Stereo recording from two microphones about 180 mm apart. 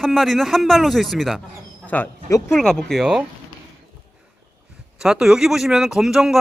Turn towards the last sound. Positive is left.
turn(degrees=-5)  # may be behind; listen again after turning